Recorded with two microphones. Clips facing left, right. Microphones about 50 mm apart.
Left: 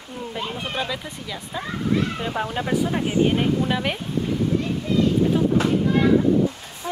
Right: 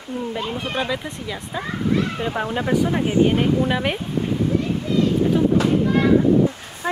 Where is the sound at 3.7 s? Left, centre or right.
Centre.